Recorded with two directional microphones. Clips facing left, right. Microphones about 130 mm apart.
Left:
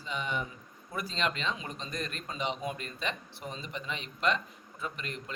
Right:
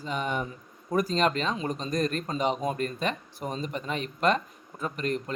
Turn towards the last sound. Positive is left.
turn(degrees=-45)  # may be behind; listen again after turning